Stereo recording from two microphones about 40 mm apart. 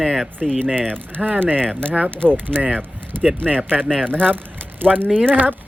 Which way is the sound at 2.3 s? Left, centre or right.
Right.